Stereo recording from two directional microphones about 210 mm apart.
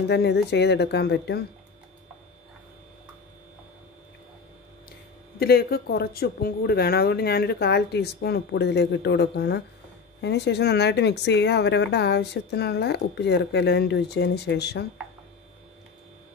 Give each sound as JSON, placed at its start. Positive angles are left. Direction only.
{"t": 0.1, "sound": "speech", "side_deg": 55}
{"t": 5.4, "sound": "speech", "side_deg": 45}